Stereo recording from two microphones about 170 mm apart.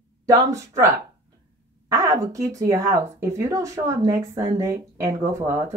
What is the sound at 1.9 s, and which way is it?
Speech, 20° right (ahead or behind).